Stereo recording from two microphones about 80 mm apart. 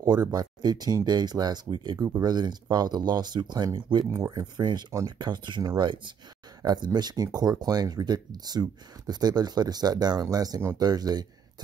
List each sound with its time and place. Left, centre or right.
0.1 s speech: right